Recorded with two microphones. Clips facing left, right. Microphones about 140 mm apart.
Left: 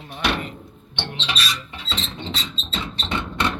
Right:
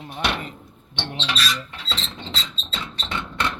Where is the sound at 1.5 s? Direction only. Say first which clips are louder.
Right 1 dB; 10° left (ahead or behind).